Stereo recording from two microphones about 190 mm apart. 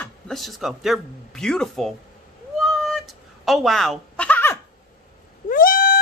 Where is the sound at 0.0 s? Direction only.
Centre (ahead or behind).